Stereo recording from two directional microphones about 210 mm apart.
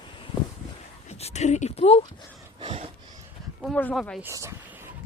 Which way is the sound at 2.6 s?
30° right (ahead or behind).